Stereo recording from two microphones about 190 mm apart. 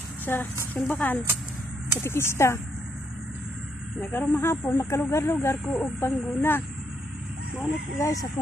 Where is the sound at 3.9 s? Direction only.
10° left (ahead or behind).